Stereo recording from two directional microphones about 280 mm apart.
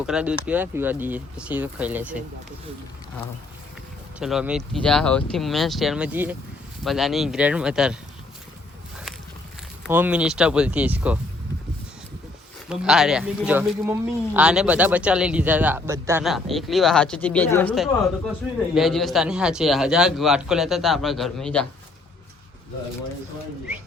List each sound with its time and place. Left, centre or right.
0.0 s speech: centre
4.2 s speech: centre
9.8 s speech: centre
12.6 s speech: centre